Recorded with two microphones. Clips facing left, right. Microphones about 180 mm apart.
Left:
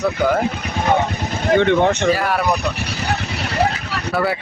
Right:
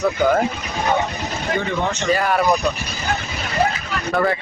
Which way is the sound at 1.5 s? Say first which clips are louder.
Left 9 dB; 70° left (ahead or behind).